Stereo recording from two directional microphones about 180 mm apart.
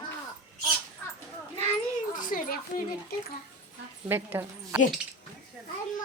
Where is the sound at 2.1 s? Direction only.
50° left (ahead or behind).